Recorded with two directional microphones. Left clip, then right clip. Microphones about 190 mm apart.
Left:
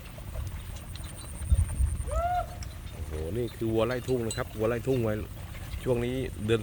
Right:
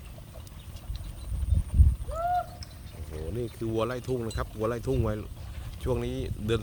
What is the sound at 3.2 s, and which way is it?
Speech, 10° right (ahead or behind).